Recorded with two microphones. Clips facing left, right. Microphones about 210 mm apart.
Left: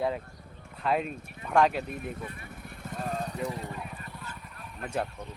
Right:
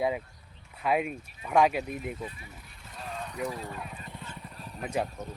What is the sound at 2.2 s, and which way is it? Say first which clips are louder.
Vehicle: even; 60° left (ahead or behind).